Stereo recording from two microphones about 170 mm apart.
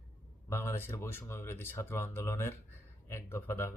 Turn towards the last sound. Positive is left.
turn(degrees=15)  # may be behind; listen again after turning